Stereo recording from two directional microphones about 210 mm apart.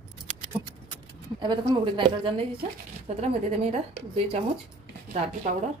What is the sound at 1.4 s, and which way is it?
Speech, 20° right (ahead or behind).